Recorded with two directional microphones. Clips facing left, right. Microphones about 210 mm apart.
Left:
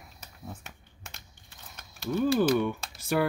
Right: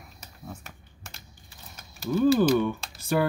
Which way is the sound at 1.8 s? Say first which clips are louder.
Right 4 dB; 5° right (ahead or behind).